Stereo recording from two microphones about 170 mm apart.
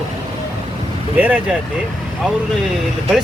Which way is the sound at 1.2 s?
10° right (ahead or behind).